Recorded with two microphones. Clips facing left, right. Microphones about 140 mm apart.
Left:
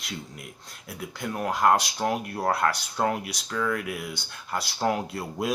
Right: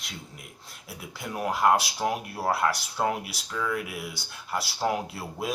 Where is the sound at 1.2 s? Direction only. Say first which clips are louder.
Left 1 dB; 10° right (ahead or behind).